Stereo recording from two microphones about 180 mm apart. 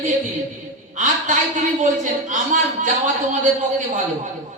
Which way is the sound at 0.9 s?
45° right (ahead or behind).